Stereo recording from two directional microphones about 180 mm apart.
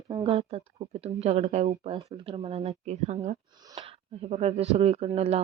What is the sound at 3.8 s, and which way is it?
Speech, 35° right (ahead or behind).